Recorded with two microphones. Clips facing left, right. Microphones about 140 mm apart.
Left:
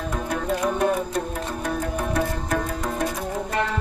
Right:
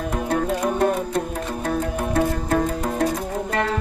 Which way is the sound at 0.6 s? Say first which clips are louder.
Right 2 dB; 30° right (ahead or behind).